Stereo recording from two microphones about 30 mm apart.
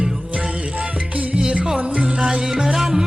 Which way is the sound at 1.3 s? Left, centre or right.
Right.